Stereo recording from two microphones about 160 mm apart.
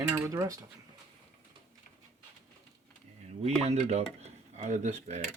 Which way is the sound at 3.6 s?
40° right (ahead or behind).